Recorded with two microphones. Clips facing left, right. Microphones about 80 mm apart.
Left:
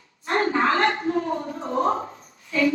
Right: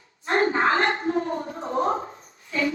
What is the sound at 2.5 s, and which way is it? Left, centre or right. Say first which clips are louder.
Child singing: left 4 dB; right.